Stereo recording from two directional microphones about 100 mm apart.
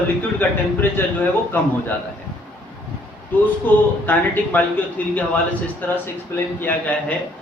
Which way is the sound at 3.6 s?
15° left (ahead or behind).